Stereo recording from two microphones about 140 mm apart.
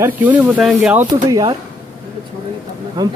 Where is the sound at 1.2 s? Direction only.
25° right (ahead or behind).